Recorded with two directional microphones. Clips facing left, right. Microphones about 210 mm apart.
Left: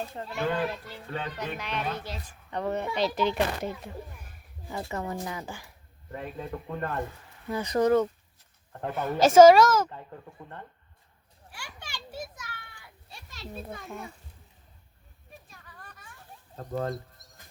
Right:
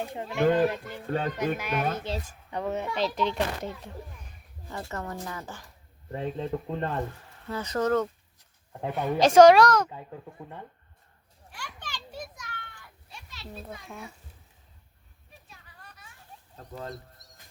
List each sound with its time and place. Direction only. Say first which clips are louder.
0.0 s speech: right 2 dB; 15° right (ahead or behind)
0.3 s speech: right 7 dB; 45° right (ahead or behind)
2.5 s speech: left 1 dB; 5° right (ahead or behind); by 5.7 s 10° left (ahead or behind)
6.1 s speech: right 5 dB; 30° right (ahead or behind)
7.4 s a woman's voice: left 3 dB; 15° left (ahead or behind)
11.5 s children playing: right 2 dB; 10° left (ahead or behind)
13.5 s a woman's voice: left 2 dB; 5° left (ahead or behind)
15.4 s children playing: left 2 dB; 50° left (ahead or behind)
16.6 s speech: left 8 dB; 50° left (ahead or behind)